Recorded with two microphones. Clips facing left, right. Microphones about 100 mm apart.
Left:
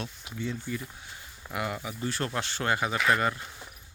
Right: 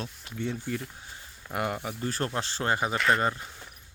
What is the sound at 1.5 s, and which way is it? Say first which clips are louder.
Speech: right 2 dB; 45° right (ahead or behind).